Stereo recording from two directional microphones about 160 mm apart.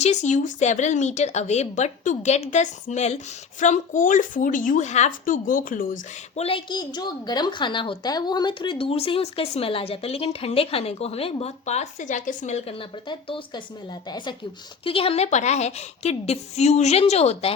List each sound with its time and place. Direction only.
0.0 s speech: 45° left (ahead or behind)
6.3 s a woman's voice: 35° left (ahead or behind)